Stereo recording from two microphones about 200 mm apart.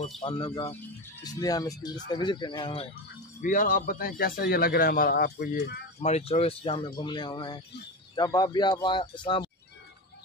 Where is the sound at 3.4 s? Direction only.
40° left (ahead or behind).